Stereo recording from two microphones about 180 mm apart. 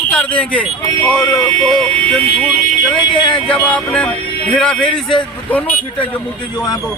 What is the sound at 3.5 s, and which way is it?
Speech, 5° left (ahead or behind).